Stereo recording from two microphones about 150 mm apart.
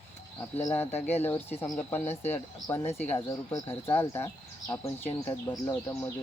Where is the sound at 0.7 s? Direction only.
15° left (ahead or behind).